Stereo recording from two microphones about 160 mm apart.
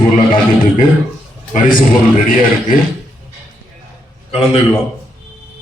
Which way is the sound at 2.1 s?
55° left (ahead or behind).